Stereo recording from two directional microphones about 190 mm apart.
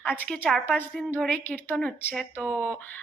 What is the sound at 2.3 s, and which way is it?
Speech, 10° right (ahead or behind).